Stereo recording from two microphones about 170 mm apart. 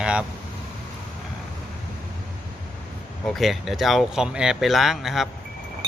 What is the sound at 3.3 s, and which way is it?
Speech, centre (ahead or behind).